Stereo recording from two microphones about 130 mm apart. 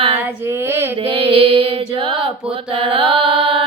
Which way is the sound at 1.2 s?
45° right (ahead or behind).